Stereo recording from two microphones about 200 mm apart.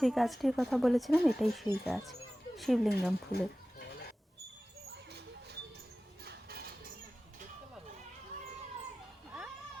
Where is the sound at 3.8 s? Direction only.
55° left (ahead or behind).